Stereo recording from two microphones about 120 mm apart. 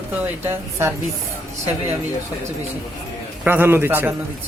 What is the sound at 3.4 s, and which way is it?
Speech, 15° right (ahead or behind).